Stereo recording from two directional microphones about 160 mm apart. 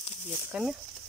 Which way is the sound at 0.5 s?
5° right (ahead or behind).